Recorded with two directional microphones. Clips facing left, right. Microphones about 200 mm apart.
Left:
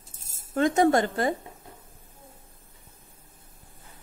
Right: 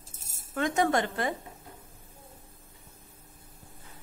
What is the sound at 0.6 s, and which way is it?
Speech, 35° left (ahead or behind).